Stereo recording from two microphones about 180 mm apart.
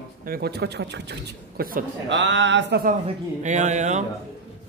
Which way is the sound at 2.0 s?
85° right.